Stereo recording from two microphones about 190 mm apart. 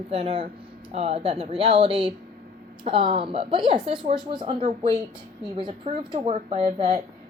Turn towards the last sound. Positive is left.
turn(degrees=-30)  # may be behind; listen again after turning